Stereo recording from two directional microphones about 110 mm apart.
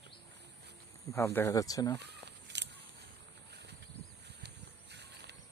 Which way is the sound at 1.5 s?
35° left (ahead or behind).